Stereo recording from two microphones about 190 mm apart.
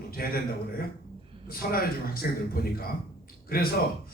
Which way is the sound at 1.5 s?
50° left (ahead or behind).